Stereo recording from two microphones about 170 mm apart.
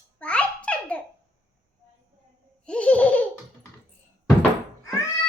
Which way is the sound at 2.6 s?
5° left (ahead or behind).